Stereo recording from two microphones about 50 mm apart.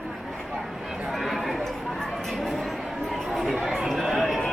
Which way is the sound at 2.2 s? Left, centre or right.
Centre.